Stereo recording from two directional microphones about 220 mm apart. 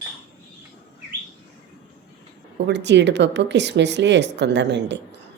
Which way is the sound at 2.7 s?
50° right (ahead or behind).